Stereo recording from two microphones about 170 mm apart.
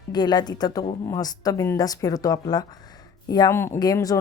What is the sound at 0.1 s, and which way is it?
A woman's voice, 25° left (ahead or behind).